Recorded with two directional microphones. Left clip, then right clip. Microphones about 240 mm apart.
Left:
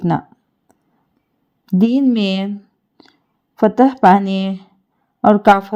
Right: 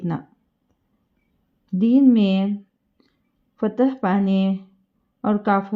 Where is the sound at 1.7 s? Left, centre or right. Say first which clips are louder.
Left 1 dB; left.